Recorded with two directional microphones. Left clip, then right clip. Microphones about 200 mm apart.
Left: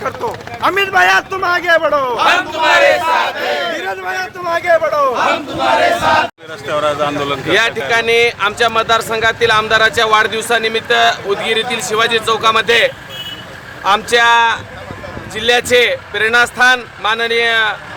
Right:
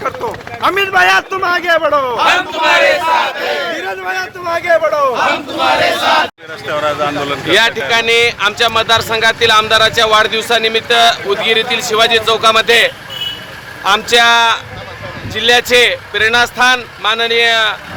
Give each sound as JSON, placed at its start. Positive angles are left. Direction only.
{"t": 0.0, "sound": "speech", "side_deg": 5}
{"t": 2.1, "sound": "a man's voice", "side_deg": 20}
{"t": 3.8, "sound": "speech", "side_deg": 0}
{"t": 6.7, "sound": "speech", "side_deg": 10}
{"t": 7.4, "sound": "speech", "side_deg": 0}